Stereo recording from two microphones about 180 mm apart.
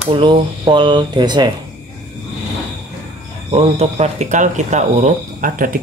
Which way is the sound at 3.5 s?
35° right (ahead or behind).